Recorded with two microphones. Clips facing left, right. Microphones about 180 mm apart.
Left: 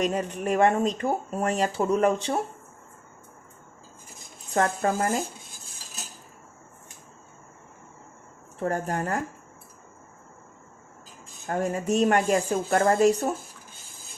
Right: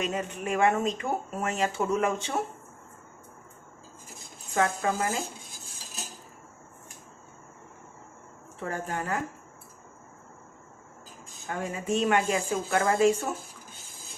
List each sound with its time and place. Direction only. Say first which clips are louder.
0.0 s speech: left 5 dB; 40° left (ahead or behind)
4.5 s a woman's voice: left 3 dB; 45° left (ahead or behind)
8.6 s a woman's voice: left 5 dB; 45° left (ahead or behind)
11.4 s a woman's voice: left 5 dB; 45° left (ahead or behind)